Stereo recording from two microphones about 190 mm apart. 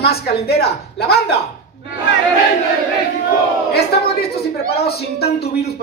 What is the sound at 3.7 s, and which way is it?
A woman's voice, 55° left (ahead or behind).